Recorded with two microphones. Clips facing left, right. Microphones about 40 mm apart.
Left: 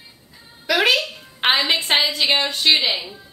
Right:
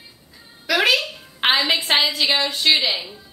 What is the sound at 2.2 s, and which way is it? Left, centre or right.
Speech, left.